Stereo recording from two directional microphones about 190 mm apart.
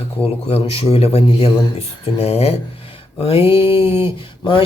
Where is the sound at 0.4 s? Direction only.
30° left (ahead or behind).